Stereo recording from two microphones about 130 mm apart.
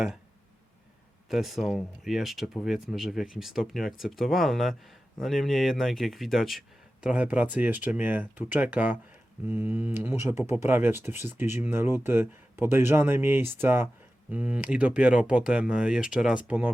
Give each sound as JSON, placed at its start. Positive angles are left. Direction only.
{"t": 1.3, "sound": "speech", "side_deg": 0}